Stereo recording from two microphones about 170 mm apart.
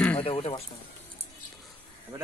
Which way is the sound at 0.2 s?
35° left (ahead or behind).